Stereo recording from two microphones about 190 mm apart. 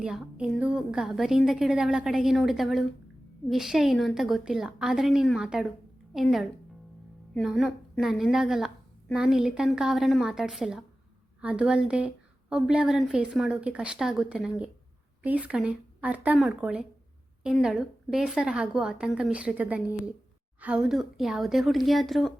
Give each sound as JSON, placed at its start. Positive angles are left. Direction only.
{"t": 0.0, "sound": "a woman's voice", "side_deg": -5}